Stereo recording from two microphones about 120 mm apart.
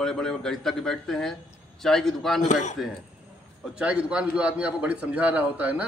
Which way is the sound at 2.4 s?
85° left.